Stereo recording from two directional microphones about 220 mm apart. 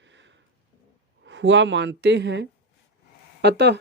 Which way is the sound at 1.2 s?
55° right (ahead or behind).